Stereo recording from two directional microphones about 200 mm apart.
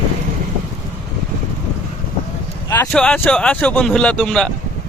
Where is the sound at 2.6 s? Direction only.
10° left (ahead or behind).